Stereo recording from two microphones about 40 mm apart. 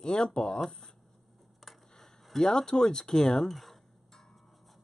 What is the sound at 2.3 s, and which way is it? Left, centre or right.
Speech, centre.